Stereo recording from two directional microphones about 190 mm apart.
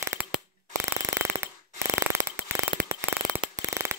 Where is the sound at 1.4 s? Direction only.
15° right (ahead or behind).